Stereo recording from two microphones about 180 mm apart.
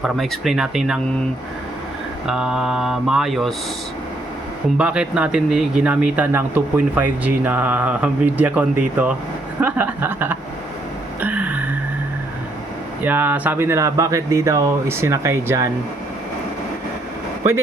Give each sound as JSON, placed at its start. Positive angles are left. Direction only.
{"t": 0.0, "sound": "mantra", "side_deg": 0}
{"t": 2.2, "sound": "mantra", "side_deg": -5}
{"t": 4.8, "sound": "speech", "side_deg": -5}
{"t": 9.6, "sound": "a sound", "side_deg": -10}
{"t": 11.2, "sound": "music", "side_deg": -10}
{"t": 13.0, "sound": "speech", "side_deg": -10}